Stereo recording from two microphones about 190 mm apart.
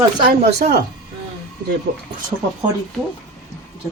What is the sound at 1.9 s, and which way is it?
Speech, 60° right (ahead or behind).